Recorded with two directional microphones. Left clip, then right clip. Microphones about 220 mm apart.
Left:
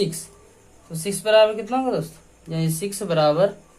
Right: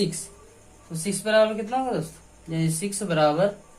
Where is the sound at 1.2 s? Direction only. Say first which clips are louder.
Left 4 dB; 40° left (ahead or behind).